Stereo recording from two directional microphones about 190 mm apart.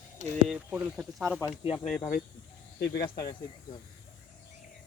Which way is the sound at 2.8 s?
60° left (ahead or behind).